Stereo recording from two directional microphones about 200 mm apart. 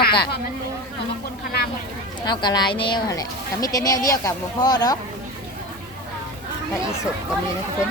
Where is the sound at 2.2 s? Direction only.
20° left (ahead or behind).